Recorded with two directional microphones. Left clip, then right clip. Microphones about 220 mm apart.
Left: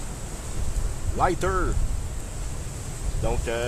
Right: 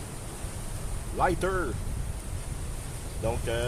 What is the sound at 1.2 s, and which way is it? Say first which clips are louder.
Speech: left 3 dB; 15° left (ahead or behind).